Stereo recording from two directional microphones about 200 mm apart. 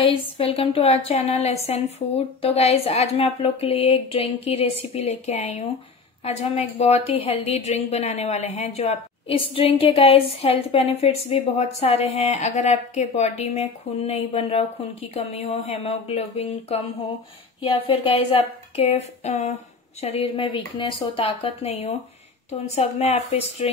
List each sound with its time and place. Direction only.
0.4 s a woman's voice: 30° left (ahead or behind)
17.6 s a sound: 25° left (ahead or behind)
22.5 s a woman's voice: 30° left (ahead or behind)